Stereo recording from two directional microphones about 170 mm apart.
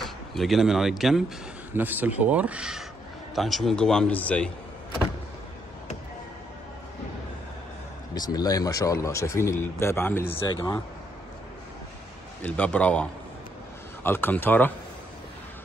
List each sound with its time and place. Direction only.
0.0 s a man's voice: centre (ahead or behind)
8.1 s speech: 20° left (ahead or behind)
10.5 s speech: 25° left (ahead or behind)
12.4 s speech: 10° left (ahead or behind)